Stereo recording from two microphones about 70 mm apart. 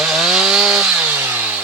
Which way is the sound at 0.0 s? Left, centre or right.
Centre.